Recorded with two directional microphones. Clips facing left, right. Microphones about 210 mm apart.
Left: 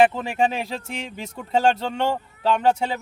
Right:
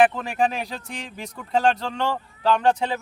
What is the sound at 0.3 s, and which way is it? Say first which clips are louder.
Speech: left 1 dB; 25° left (ahead or behind).